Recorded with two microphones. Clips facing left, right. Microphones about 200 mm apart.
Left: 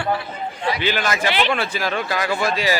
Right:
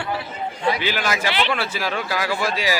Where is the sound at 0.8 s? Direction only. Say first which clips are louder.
Left 2 dB; 10° right (ahead or behind).